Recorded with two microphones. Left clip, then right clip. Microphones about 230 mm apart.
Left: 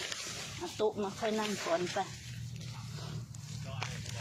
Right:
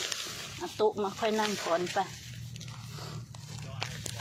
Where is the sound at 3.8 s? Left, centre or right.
Right.